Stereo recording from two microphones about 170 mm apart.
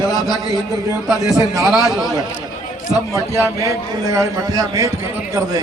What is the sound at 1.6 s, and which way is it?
Speech, centre (ahead or behind).